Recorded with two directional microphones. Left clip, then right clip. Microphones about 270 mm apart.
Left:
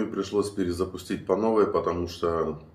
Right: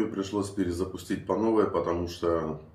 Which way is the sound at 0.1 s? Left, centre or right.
Centre.